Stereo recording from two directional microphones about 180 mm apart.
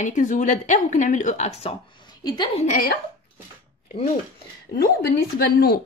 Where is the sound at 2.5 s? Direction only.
45° left (ahead or behind).